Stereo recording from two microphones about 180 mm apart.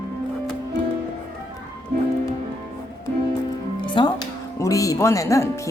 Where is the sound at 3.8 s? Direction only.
25° left (ahead or behind).